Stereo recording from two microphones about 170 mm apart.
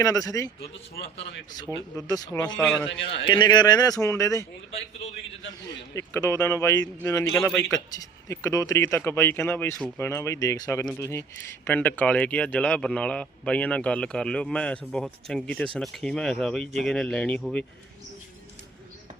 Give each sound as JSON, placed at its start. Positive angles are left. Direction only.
{"t": 0.0, "sound": "speech", "side_deg": 20}
{"t": 1.5, "sound": "speech", "side_deg": 20}
{"t": 2.6, "sound": "speech", "side_deg": 5}
{"t": 2.9, "sound": "a man's voice", "side_deg": 90}
{"t": 3.2, "sound": "speech", "side_deg": 25}
{"t": 5.9, "sound": "speech", "side_deg": 15}